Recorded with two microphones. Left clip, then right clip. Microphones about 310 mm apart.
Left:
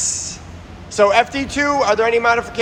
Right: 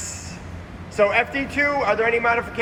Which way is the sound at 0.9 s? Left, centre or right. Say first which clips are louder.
Left 5 dB; centre.